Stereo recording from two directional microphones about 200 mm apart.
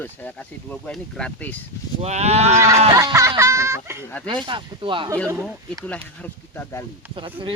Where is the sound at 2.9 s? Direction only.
15° right (ahead or behind).